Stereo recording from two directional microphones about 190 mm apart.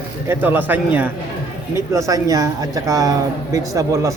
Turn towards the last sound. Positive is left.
turn(degrees=-15)  # may be behind; listen again after turning